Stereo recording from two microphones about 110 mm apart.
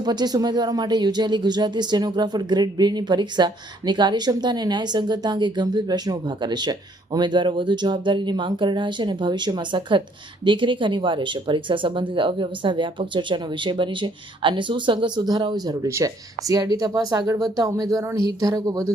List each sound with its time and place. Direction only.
0.0 s speech: 40° right (ahead or behind)